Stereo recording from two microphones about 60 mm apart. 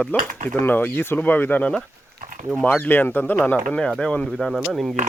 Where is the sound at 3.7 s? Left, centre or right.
Centre.